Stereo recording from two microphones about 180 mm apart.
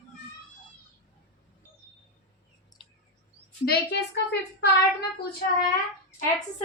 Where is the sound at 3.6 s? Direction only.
60° left (ahead or behind).